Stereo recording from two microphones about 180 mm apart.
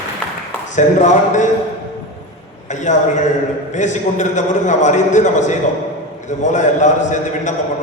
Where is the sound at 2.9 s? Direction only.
45° left (ahead or behind).